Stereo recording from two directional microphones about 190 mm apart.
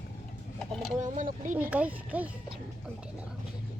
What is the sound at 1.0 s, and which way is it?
Speech, 40° right (ahead or behind).